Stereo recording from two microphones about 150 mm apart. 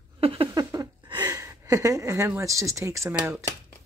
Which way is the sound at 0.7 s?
25° right (ahead or behind).